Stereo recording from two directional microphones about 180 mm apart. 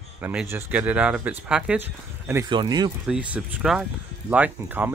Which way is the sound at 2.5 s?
25° right (ahead or behind).